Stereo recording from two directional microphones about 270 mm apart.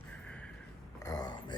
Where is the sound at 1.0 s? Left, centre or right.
Centre.